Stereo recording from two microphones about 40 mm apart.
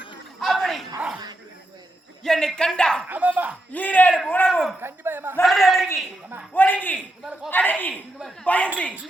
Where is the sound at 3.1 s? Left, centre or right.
Right.